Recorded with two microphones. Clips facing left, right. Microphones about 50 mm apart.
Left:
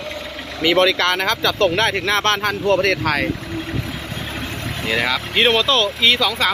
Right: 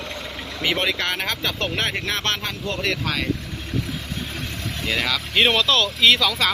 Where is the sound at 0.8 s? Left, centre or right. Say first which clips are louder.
Left 8 dB; left.